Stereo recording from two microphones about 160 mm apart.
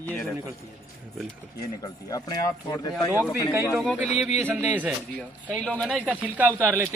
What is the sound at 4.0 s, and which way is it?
Speech, 45° left (ahead or behind).